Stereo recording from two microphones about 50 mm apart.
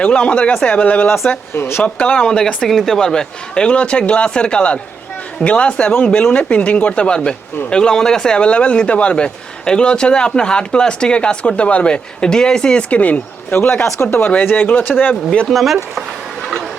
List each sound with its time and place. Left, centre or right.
0.0 s speech: left
1.5 s speech: left
1.8 s speech: left
13.5 s speech: left
15.4 s speech: centre